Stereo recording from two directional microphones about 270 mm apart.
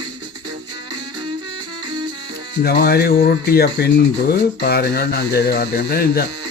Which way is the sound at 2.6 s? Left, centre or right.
Left.